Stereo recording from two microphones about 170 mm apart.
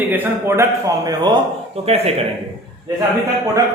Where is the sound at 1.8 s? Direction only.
35° right (ahead or behind).